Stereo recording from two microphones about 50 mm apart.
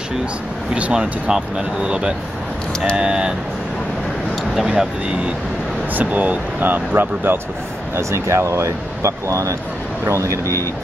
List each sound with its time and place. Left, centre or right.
0.9 s speech: centre
4.6 s speech: centre
5.9 s speech: right
7.9 s speech: right